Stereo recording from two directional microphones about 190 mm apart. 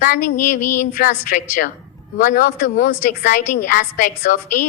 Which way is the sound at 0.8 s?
45° left (ahead or behind).